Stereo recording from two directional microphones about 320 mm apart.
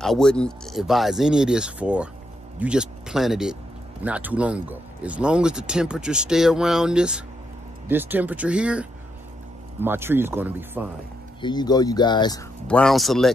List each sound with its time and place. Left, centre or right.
0.0 s speech: centre
11.4 s speech: centre